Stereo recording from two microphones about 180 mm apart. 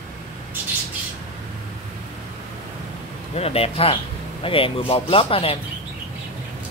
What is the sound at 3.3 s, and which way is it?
Speech, 35° left (ahead or behind).